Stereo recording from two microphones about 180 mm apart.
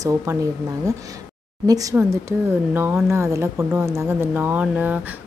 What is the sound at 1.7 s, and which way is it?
Speech, 20° right (ahead or behind).